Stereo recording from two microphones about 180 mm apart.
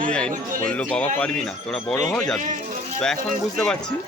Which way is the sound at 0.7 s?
10° left (ahead or behind).